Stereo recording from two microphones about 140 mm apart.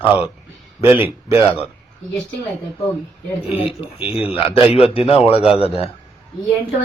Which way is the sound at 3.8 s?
45° left (ahead or behind).